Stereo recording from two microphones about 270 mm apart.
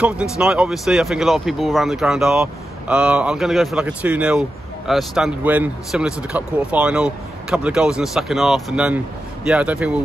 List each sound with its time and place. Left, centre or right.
0.0 s speech: centre